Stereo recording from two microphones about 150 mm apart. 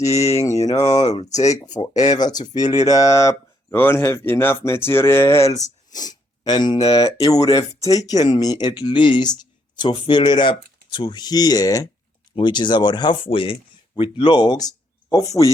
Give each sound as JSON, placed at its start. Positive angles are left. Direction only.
{"t": 0.6, "sound": "speech", "side_deg": 25}
{"t": 1.9, "sound": "speech", "side_deg": 50}
{"t": 2.1, "sound": "speech", "side_deg": 25}